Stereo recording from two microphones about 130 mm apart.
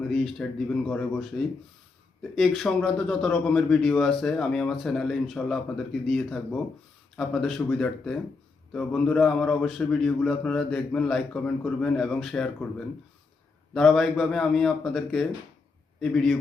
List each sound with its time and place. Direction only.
0.1 s speech: centre (ahead or behind)
13.7 s speech: 5° left (ahead or behind)